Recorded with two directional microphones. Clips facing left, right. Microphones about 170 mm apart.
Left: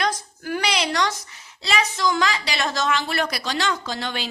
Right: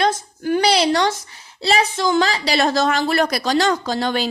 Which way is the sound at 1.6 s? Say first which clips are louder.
Right 5 dB; 30° right (ahead or behind).